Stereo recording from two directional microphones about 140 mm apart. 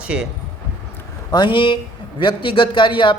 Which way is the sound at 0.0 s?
5° right (ahead or behind).